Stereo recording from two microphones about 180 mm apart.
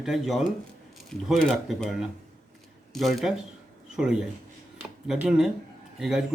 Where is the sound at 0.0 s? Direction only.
Centre (ahead or behind).